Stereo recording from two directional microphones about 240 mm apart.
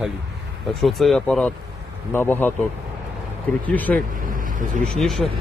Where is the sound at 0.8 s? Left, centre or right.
Centre.